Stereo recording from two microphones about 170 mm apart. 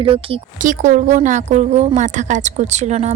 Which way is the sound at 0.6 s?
50° right (ahead or behind).